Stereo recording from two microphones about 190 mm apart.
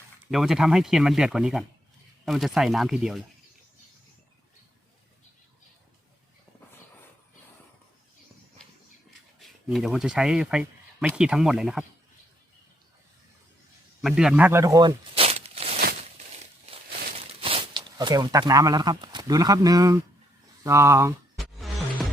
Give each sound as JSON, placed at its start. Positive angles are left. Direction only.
{"t": 0.3, "sound": "speech", "side_deg": 0}
{"t": 9.6, "sound": "speech", "side_deg": 0}
{"t": 14.0, "sound": "a sound", "side_deg": -5}
{"t": 17.4, "sound": "speech", "side_deg": -30}